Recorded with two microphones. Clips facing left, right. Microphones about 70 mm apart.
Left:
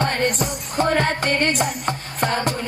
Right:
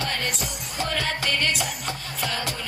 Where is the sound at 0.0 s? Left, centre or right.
Left.